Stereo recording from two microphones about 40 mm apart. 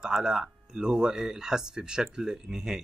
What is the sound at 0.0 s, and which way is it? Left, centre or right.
Speech, centre.